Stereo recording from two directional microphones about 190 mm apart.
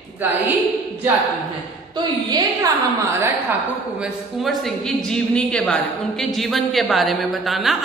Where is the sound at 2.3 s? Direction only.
20° right (ahead or behind).